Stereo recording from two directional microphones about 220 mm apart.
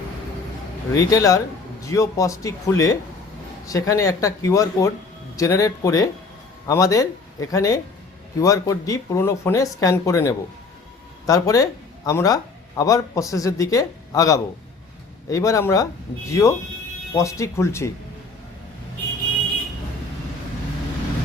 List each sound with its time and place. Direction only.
0.9 s speech: 15° left (ahead or behind)